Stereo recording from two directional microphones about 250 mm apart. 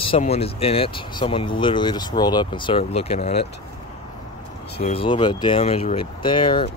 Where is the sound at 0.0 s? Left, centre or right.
Left.